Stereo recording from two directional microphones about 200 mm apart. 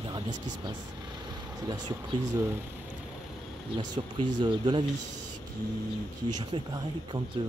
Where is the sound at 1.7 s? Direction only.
20° right (ahead or behind).